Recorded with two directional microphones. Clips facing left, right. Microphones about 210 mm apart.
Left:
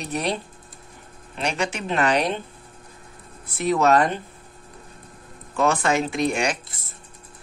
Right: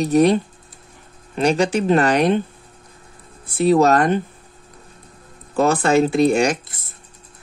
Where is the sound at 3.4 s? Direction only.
30° right (ahead or behind).